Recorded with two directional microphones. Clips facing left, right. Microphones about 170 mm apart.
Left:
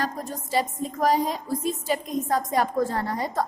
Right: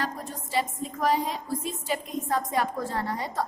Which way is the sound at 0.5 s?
40° left (ahead or behind).